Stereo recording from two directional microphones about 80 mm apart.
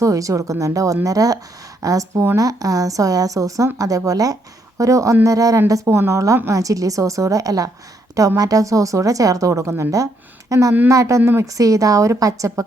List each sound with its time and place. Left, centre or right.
0.0 s a woman's voice: right
11.2 s speech: right
11.4 s a woman's voice: right